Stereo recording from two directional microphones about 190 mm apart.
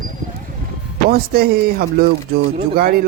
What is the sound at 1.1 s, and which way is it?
Speech, 55° right (ahead or behind).